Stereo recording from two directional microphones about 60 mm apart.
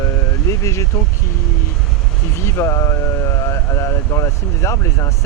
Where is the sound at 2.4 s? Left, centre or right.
Left.